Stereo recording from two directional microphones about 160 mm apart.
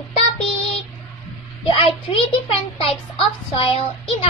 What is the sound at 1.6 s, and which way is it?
A child's voice, 35° left (ahead or behind).